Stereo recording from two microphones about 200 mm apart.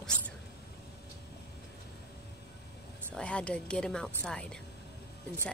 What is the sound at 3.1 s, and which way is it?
A woman's voice, 5° left (ahead or behind).